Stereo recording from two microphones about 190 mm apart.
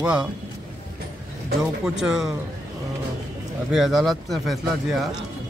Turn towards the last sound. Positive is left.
turn(degrees=0)  # may be behind; listen again after turning